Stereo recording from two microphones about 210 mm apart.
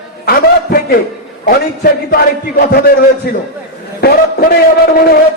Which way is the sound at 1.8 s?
45° left (ahead or behind).